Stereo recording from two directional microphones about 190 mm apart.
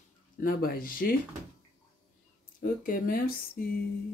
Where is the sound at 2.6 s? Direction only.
50° left (ahead or behind).